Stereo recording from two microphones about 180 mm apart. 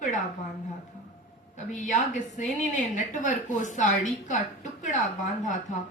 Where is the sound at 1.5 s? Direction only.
45° left (ahead or behind).